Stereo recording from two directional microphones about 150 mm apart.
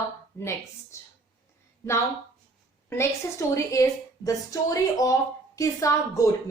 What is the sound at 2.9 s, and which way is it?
A woman's voice, 20° left (ahead or behind).